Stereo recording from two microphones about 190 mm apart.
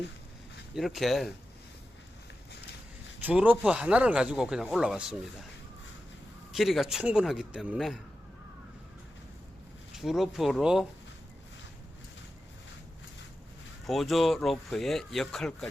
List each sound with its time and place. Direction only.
0.8 s speech: centre (ahead or behind)
3.2 s speech: 10° right (ahead or behind)
6.5 s speech: centre (ahead or behind)
9.9 s speech: centre (ahead or behind)
13.8 s speech: centre (ahead or behind)